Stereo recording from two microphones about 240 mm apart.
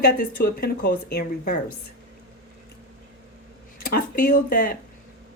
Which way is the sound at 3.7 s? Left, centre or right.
Left.